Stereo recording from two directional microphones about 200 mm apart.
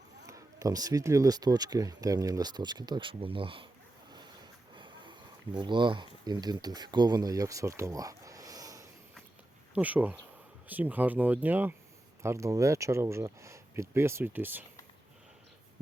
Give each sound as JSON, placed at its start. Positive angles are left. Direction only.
{"t": 0.3, "sound": "speech", "side_deg": -15}
{"t": 4.7, "sound": "a sound", "side_deg": -25}
{"t": 5.5, "sound": "speech", "side_deg": -25}